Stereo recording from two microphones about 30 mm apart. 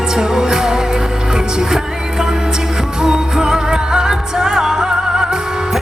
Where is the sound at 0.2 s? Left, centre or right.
Right.